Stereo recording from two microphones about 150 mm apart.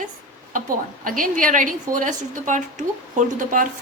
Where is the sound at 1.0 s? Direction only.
65° right (ahead or behind).